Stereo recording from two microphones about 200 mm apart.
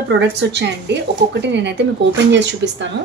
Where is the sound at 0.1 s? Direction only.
60° right (ahead or behind).